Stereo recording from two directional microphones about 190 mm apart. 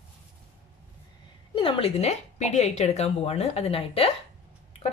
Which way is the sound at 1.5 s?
30° left (ahead or behind).